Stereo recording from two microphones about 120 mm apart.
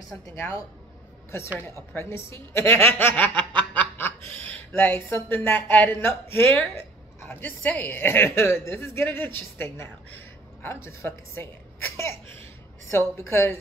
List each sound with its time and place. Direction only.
0.4 s a woman's voice: 25° left (ahead or behind)
2.0 s a woman's voice: 20° left (ahead or behind)